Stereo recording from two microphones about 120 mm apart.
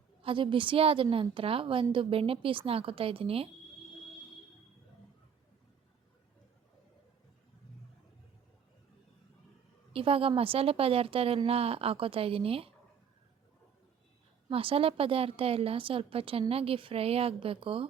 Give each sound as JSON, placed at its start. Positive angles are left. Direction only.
{"t": 0.2, "sound": "a woman's voice", "side_deg": -45}
{"t": 9.9, "sound": "a woman's voice", "side_deg": -50}
{"t": 14.5, "sound": "a woman's voice", "side_deg": -50}